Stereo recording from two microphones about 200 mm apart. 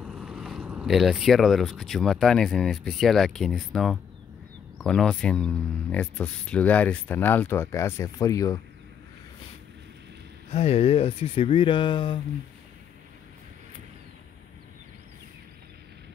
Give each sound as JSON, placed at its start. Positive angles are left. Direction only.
{"t": 0.0, "sound": "speech", "side_deg": -5}
{"t": 10.5, "sound": "speech", "side_deg": 30}